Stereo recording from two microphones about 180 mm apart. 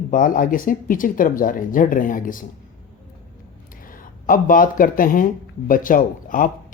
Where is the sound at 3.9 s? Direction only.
50° left (ahead or behind).